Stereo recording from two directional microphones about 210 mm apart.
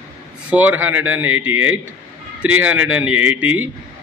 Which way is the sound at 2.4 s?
5° right (ahead or behind).